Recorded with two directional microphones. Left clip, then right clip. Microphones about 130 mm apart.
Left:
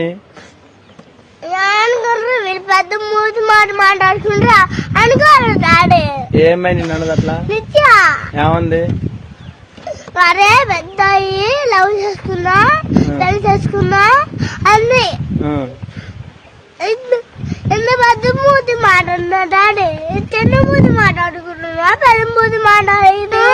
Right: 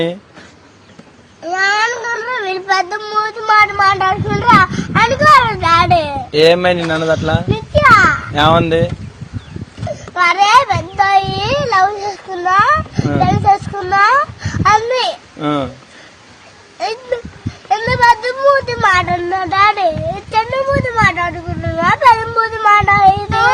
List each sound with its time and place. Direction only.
1.5 s child singing: 30° left (ahead or behind)
6.3 s speech: 5° left (ahead or behind)
7.5 s children playing: 40° left (ahead or behind)
8.4 s speech: centre (ahead or behind)
10.2 s a child's voice: 35° left (ahead or behind)
15.4 s speech: centre (ahead or behind)
16.8 s a child's voice: 30° left (ahead or behind)